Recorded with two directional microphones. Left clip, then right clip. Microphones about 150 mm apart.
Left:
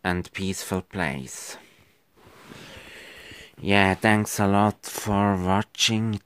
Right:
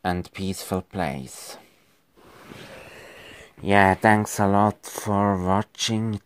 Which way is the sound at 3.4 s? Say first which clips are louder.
Right 3 dB; 15° left (ahead or behind).